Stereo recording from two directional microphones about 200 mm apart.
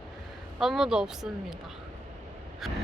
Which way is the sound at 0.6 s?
Centre (ahead or behind).